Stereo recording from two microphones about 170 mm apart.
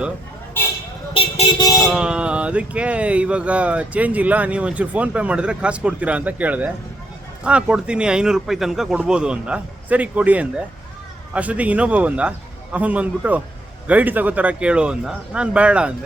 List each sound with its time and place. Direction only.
1.1 s vehicle: 35° left (ahead or behind)
1.9 s speech: 5° right (ahead or behind)